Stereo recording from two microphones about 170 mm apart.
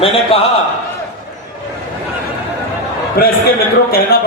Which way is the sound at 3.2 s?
60° left (ahead or behind).